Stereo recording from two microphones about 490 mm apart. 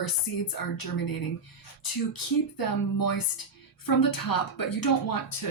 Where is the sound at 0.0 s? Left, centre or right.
Left.